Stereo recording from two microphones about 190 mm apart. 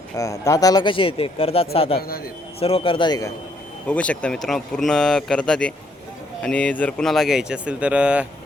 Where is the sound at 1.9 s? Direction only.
50° left (ahead or behind).